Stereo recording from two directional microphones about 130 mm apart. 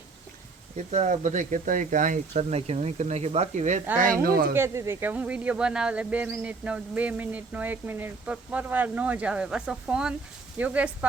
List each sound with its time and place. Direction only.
0.9 s speech: 60° right (ahead or behind); by 2.1 s 90° right
2.3 s speech: 55° right (ahead or behind)
3.9 s speech: 90° right
4.5 s speech: 20° right (ahead or behind)